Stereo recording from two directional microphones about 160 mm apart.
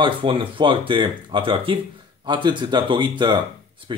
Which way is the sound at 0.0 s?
35° right (ahead or behind).